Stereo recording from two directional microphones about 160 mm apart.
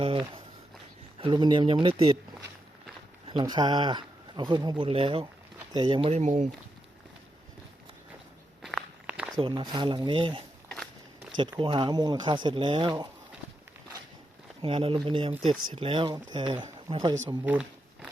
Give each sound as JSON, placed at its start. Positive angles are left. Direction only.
{"t": 0.0, "sound": "a sound", "side_deg": -35}
{"t": 1.2, "sound": "speech", "side_deg": -30}
{"t": 3.2, "sound": "speech", "side_deg": -30}
{"t": 8.6, "sound": "walk", "side_deg": -5}
{"t": 9.4, "sound": "speech", "side_deg": -30}
{"t": 11.6, "sound": "speech", "side_deg": -30}
{"t": 14.6, "sound": "speech", "side_deg": -35}
{"t": 17.4, "sound": "a sound", "side_deg": -5}